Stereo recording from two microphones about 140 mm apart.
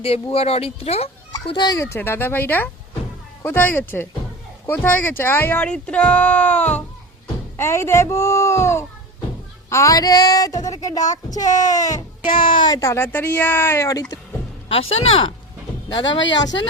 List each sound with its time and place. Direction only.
0.0 s speech: 45° left (ahead or behind)
1.3 s speech: 30° left (ahead or behind)
12.2 s speech: 80° left
12.5 s speech: 30° left (ahead or behind)
14.7 s speech: 40° left (ahead or behind)